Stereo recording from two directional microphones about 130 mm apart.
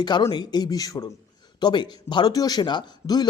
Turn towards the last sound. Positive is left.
turn(degrees=30)  # may be behind; listen again after turning